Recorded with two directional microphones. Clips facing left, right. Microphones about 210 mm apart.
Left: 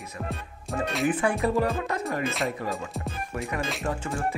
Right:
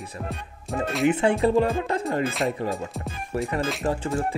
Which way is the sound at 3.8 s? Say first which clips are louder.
Right 5 dB; 35° right (ahead or behind).